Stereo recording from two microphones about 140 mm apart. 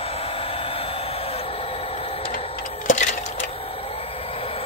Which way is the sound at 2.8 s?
60° left (ahead or behind).